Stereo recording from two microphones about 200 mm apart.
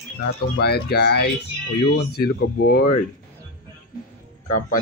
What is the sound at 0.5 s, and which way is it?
Speech, 55° left (ahead or behind).